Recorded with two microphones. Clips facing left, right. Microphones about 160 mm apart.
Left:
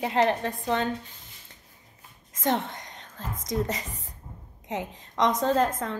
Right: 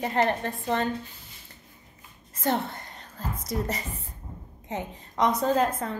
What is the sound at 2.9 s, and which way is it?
Whispering, 90° left.